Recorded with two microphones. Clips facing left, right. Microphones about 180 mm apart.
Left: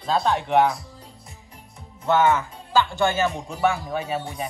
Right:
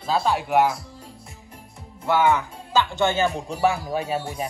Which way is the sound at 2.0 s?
10° right (ahead or behind).